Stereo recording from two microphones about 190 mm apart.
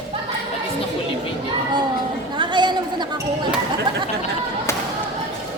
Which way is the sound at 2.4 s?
25° right (ahead or behind).